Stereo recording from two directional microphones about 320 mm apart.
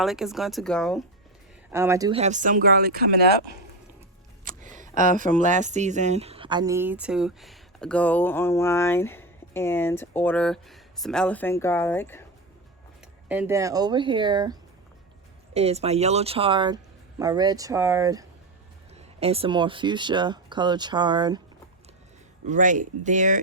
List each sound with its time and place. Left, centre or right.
0.0 s speech: centre
1.7 s speech: centre; by 3.1 s right
4.8 s speech: right; by 12.2 s centre
13.2 s speech: centre
22.4 s speech: right